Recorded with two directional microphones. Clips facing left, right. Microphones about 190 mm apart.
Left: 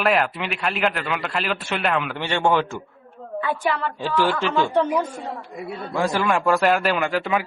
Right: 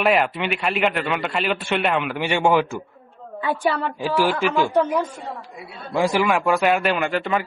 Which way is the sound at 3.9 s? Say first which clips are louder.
Right 1 dB; 10° right (ahead or behind).